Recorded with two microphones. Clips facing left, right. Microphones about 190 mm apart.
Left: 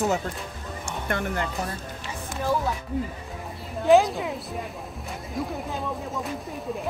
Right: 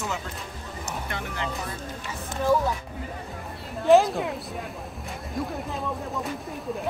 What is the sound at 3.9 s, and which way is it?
Speech, centre (ahead or behind).